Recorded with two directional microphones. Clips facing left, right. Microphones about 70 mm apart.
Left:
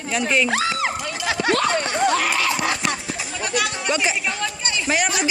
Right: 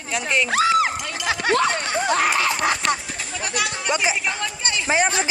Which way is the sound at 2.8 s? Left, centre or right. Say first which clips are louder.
Right 2 dB; centre.